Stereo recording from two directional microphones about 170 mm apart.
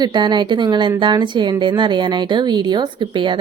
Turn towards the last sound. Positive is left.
turn(degrees=-30)  # may be behind; listen again after turning